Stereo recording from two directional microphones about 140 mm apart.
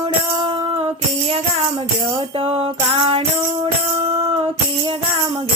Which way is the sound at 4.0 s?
40° right (ahead or behind).